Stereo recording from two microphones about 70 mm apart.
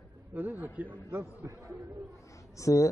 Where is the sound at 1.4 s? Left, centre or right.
Right.